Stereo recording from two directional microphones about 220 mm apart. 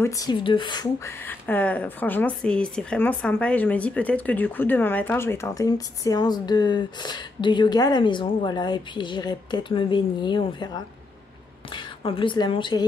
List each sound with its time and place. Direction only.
0.0 s a woman's voice: 15° left (ahead or behind)